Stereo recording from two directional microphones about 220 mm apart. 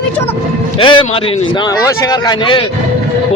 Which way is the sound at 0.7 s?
25° left (ahead or behind).